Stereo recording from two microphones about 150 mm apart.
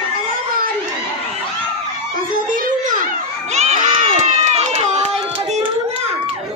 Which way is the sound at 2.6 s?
60° right (ahead or behind).